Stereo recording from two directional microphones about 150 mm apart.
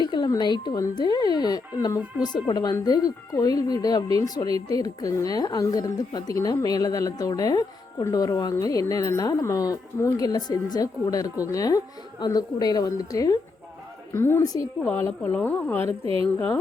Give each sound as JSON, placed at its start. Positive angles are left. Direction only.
{"t": 0.0, "sound": "speech", "side_deg": 30}